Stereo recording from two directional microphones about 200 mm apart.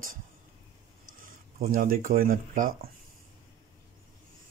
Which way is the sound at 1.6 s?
45° right (ahead or behind).